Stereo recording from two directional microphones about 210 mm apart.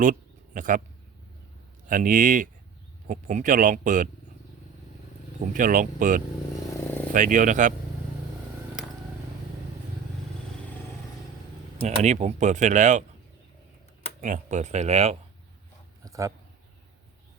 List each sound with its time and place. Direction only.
0.0 s a sound: 40° right (ahead or behind)
1.9 s speech: 40° right (ahead or behind)
5.5 s speech: 40° right (ahead or behind)
11.8 s speech: 35° right (ahead or behind)
14.2 s speech: 35° right (ahead or behind)
16.0 s a sound: 15° right (ahead or behind)